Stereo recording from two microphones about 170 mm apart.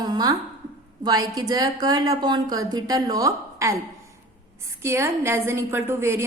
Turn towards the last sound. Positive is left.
turn(degrees=-15)  # may be behind; listen again after turning